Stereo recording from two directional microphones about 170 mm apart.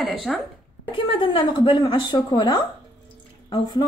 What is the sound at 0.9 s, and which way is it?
A woman's voice, 30° left (ahead or behind).